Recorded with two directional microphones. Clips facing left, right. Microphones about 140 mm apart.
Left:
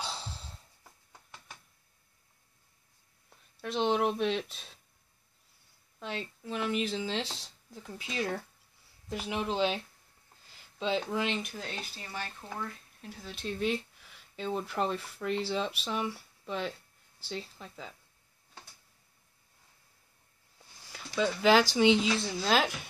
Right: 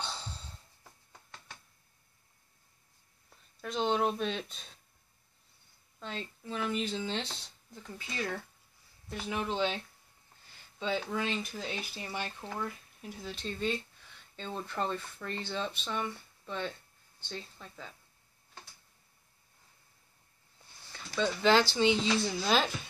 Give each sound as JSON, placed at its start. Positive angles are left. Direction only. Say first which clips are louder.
{"t": 3.6, "sound": "speech", "louder": "left 2 dB", "side_deg": 5}
{"t": 5.9, "sound": "speech", "louder": "left 3 dB", "side_deg": 5}
{"t": 8.1, "sound": "speech", "louder": "left 3 dB", "side_deg": 20}
{"t": 10.8, "sound": "speech", "louder": "left 2 dB", "side_deg": 25}
{"t": 11.5, "sound": "speech", "louder": "right 2 dB", "side_deg": 0}
{"t": 11.9, "sound": "speech", "louder": "right 2 dB", "side_deg": -20}
{"t": 12.5, "sound": "speech", "louder": "right 1 dB", "side_deg": -5}
{"t": 13.3, "sound": "speech", "louder": "left 3 dB", "side_deg": 5}
{"t": 20.9, "sound": "speech", "louder": "left 2 dB", "side_deg": 10}
{"t": 22.0, "sound": "speech", "louder": "even", "side_deg": 0}